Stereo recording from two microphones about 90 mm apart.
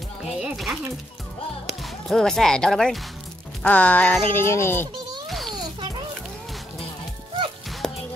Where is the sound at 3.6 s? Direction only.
15° left (ahead or behind).